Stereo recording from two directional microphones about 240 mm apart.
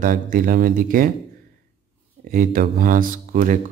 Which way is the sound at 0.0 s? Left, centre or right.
Right.